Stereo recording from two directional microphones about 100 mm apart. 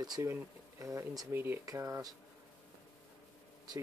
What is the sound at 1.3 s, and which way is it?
Speech, 20° right (ahead or behind).